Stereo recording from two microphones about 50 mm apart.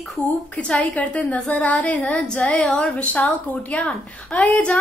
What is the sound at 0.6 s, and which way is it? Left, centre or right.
A woman's voice, left.